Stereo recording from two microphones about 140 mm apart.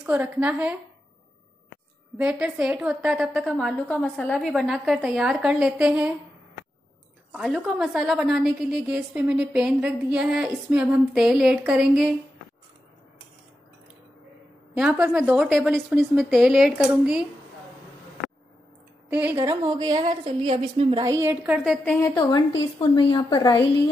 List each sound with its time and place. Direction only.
0.1 s a woman's voice: 10° right (ahead or behind)
2.1 s a woman's voice: 10° right (ahead or behind)
7.3 s a woman's voice: centre (ahead or behind)
14.8 s a woman's voice: 5° right (ahead or behind)
19.0 s a woman's voice: 10° right (ahead or behind)
19.4 s a woman's voice: 30° right (ahead or behind)
21.0 s a woman's voice: 20° right (ahead or behind)
21.4 s a woman's voice: 10° right (ahead or behind)
22.0 s a woman's voice: 30° left (ahead or behind)